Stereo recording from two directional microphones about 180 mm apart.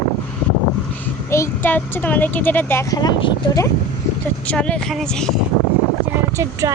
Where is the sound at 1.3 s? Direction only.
15° left (ahead or behind).